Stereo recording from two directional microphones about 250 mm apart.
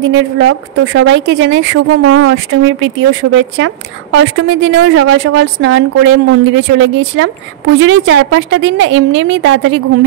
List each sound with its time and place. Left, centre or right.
0.0 s speech: right